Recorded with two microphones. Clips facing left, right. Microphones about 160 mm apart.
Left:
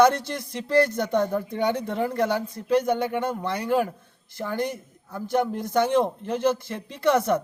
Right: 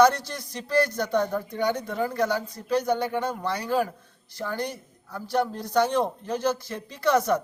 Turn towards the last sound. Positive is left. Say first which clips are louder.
# left 1 dB
turn(degrees=25)  # may be behind; listen again after turning